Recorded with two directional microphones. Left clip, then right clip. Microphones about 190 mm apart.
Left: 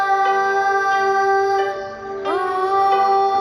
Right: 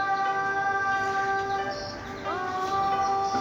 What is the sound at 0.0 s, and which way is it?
Music, 45° left (ahead or behind).